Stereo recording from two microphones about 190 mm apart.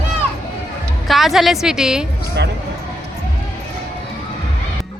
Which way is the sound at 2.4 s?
65° right (ahead or behind).